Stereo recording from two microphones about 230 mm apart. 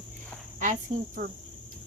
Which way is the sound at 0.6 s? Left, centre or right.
Right.